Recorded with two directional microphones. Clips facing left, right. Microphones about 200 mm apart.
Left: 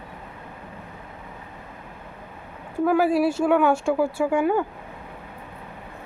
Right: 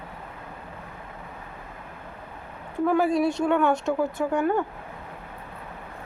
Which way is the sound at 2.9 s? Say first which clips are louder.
Left 2 dB; 5° left (ahead or behind).